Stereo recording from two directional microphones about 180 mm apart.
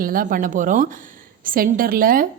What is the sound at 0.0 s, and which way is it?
A woman's voice, 50° right (ahead or behind).